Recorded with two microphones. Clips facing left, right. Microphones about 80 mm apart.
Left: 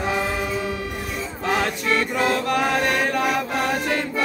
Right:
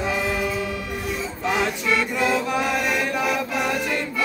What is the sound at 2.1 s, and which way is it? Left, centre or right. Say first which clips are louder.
Music: left 1 dB; left.